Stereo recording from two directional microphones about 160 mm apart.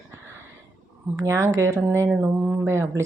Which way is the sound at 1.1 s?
20° right (ahead or behind).